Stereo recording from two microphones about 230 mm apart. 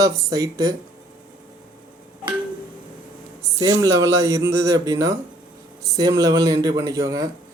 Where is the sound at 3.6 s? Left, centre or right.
Centre.